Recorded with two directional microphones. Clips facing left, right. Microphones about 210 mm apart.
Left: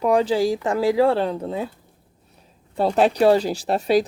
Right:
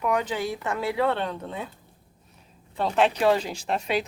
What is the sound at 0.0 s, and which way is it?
Speech, 30° left (ahead or behind).